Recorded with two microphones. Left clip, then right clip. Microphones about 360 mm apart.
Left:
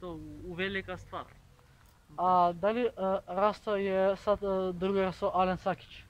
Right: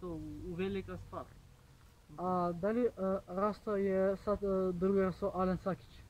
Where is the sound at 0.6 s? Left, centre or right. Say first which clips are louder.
Left 5 dB; centre.